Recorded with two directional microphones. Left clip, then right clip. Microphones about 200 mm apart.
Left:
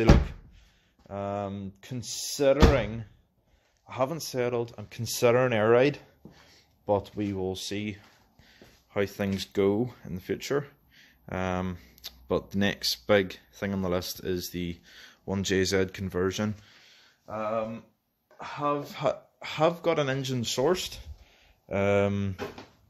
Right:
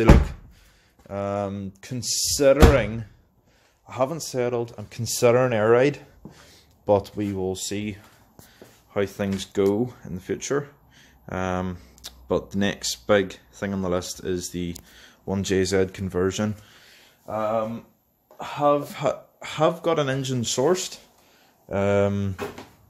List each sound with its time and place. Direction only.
1.0 s speech: 5° right (ahead or behind)
6.4 s a sound: 10° right (ahead or behind)
7.2 s speech: centre (ahead or behind)